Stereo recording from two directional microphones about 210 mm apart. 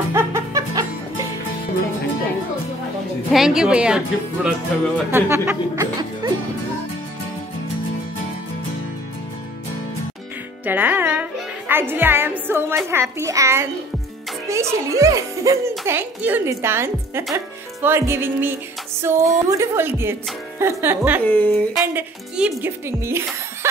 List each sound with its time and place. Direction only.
0.1 s music: 15° right (ahead or behind)
3.3 s speech: centre (ahead or behind)
10.6 s a child's voice: 10° right (ahead or behind)
21.2 s speech: 10° left (ahead or behind)
21.8 s speech: 5° right (ahead or behind)